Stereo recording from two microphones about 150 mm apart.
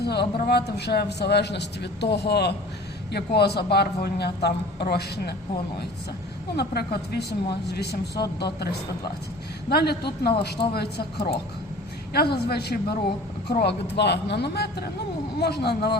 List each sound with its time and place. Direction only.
0.0 s speech: 90° left
6.6 s speech: 90° left